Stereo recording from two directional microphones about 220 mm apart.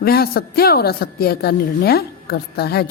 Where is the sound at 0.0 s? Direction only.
45° left (ahead or behind).